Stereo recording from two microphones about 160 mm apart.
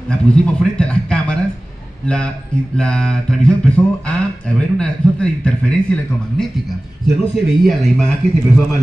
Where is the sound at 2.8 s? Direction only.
5° left (ahead or behind).